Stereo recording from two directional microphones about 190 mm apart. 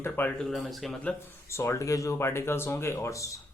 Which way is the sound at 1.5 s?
15° left (ahead or behind).